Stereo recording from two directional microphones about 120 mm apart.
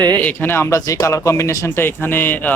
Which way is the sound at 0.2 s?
15° left (ahead or behind).